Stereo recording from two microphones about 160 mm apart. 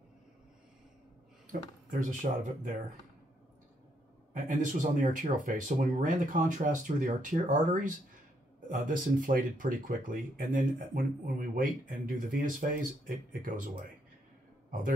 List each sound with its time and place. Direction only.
1.5 s speech: 55° right (ahead or behind)
4.3 s speech: 55° right (ahead or behind)